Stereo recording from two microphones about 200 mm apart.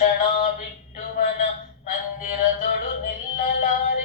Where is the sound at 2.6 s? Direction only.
45° left (ahead or behind).